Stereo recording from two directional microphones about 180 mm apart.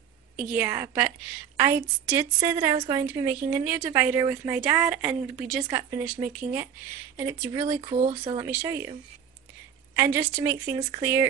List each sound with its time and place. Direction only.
0.4 s a woman's voice: 10° right (ahead or behind)
7.8 s speech: 30° right (ahead or behind)
8.4 s a woman's voice: 10° right (ahead or behind)
9.9 s a woman's voice: 15° right (ahead or behind)